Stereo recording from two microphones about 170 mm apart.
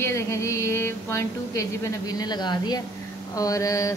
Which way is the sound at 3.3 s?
20° left (ahead or behind).